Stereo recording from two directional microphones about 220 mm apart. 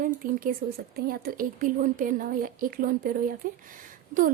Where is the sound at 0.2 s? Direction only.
40° right (ahead or behind).